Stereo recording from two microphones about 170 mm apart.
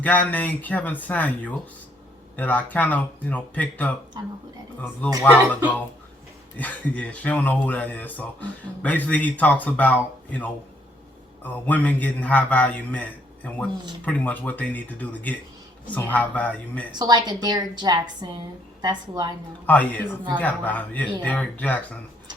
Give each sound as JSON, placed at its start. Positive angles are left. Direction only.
{"t": 0.0, "sound": "speech", "side_deg": 10}
{"t": 6.6, "sound": "speech", "side_deg": 10}
{"t": 11.6, "sound": "speech", "side_deg": 10}
{"t": 16.9, "sound": "a woman's voice", "side_deg": -25}
{"t": 19.6, "sound": "speech", "side_deg": 10}